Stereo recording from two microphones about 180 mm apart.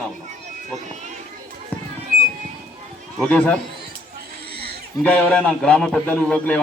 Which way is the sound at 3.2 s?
10° left (ahead or behind).